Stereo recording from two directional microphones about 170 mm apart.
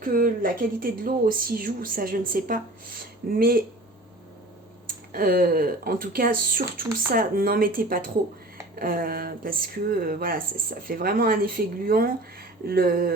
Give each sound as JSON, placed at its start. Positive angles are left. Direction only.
{"t": 0.0, "sound": "speech", "side_deg": -55}
{"t": 5.1, "sound": "speech", "side_deg": -60}